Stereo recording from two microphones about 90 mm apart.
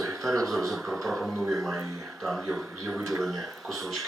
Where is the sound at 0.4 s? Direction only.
Centre (ahead or behind).